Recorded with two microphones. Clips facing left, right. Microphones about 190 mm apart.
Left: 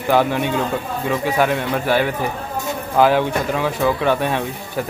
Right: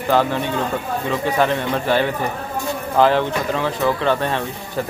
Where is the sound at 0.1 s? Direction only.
10° left (ahead or behind).